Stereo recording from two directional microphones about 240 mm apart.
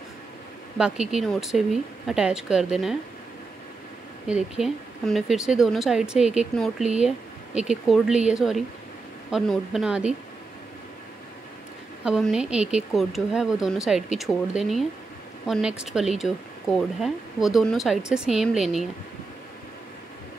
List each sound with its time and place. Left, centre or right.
0.7 s a woman's voice: centre
4.3 s a woman's voice: centre
12.0 s a woman's voice: centre